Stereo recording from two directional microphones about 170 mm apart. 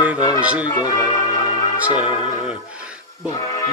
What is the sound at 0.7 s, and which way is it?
Music, 20° left (ahead or behind).